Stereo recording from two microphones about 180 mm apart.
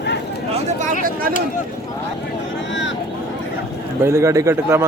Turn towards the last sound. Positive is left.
turn(degrees=-15)  # may be behind; listen again after turning